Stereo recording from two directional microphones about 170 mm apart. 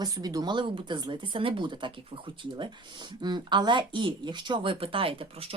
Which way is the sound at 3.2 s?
25° right (ahead or behind).